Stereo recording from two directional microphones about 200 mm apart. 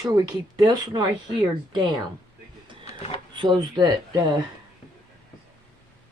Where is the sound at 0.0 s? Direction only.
20° right (ahead or behind).